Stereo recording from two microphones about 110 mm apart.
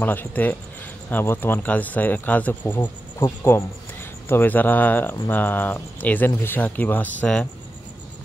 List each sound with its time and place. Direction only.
0.0 s speech: 15° left (ahead or behind)